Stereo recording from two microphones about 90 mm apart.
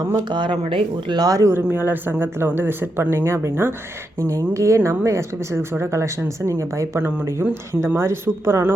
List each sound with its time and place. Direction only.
0.3 s speech: 60° right (ahead or behind)
1.3 s speech: 40° right (ahead or behind)
1.5 s speech: 25° right (ahead or behind)